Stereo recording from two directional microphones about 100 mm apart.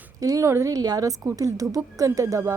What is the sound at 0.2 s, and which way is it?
Speech, 35° right (ahead or behind).